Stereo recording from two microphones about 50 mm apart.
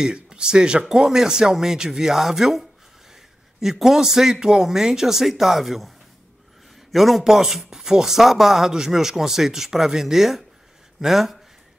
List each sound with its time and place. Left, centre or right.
0.0 s speech: centre
6.9 s speech: centre